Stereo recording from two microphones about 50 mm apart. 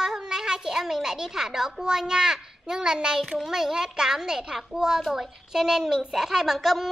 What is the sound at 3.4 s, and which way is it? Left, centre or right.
A child's voice, centre.